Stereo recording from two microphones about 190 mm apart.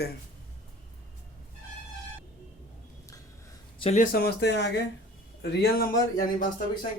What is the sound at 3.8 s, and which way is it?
Speech, 30° left (ahead or behind).